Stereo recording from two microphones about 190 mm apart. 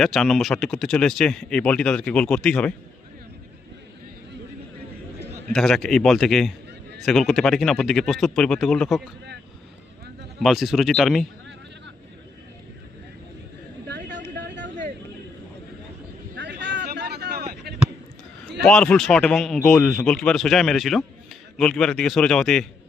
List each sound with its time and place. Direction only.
0.0 s speech: centre (ahead or behind)
5.2 s a man's voice: centre (ahead or behind)
10.4 s speech: centre (ahead or behind)
14.3 s a sound: 70° right (ahead or behind)
16.3 s a sound: 65° right (ahead or behind)
18.6 s speech: 5° left (ahead or behind)